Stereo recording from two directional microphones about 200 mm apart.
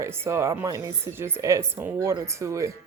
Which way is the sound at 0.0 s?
15° right (ahead or behind).